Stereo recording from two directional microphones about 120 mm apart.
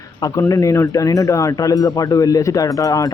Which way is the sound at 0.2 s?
25° left (ahead or behind).